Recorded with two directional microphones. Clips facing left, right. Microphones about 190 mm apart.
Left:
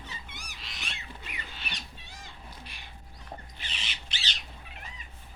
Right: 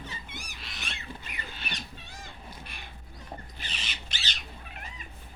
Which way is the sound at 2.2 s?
50° right (ahead or behind).